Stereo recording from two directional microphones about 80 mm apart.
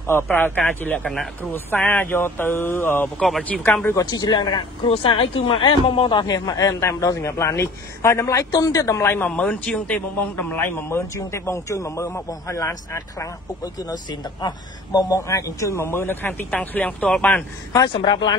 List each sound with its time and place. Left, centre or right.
0.0 s speech: left
3.2 s speech: centre
4.0 s speech: left
5.2 s speech: left
6.2 s a man's voice: left
9.3 s a man's voice: centre; by 13.3 s left
14.4 s a man's voice: left; by 17.5 s centre
17.7 s speech: left